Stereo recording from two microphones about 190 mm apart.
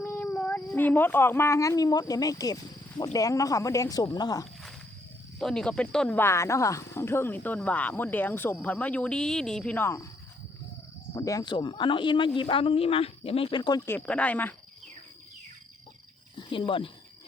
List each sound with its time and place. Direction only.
0.0 s speech: 10° left (ahead or behind)
5.4 s speech: 5° left (ahead or behind)
11.1 s speech: 15° left (ahead or behind)
16.4 s speech: 25° left (ahead or behind)